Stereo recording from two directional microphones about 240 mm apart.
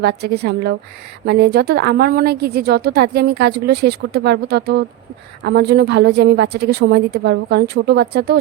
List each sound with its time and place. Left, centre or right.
0.0 s a woman's voice: right